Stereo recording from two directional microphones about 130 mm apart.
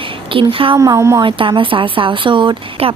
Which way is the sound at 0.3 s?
45° right (ahead or behind).